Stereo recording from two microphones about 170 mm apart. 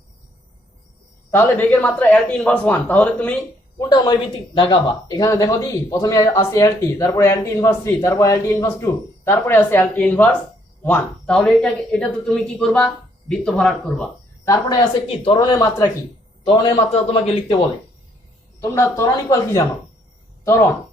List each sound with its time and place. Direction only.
1.3 s speech: 10° left (ahead or behind)
3.8 s speech: 25° left (ahead or behind); by 14.1 s 5° left (ahead or behind)
14.4 s a woman's voice: 20° left (ahead or behind)
15.0 s a woman's voice: 35° left (ahead or behind)
18.6 s a woman's voice: 15° left (ahead or behind)